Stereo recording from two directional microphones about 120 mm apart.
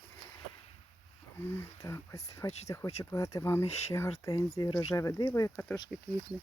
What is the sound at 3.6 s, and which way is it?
Speech, 65° left (ahead or behind).